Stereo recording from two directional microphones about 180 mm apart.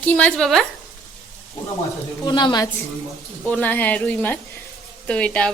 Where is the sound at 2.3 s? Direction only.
25° left (ahead or behind).